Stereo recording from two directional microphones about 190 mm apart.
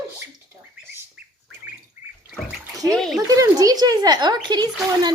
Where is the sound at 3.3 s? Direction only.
20° right (ahead or behind).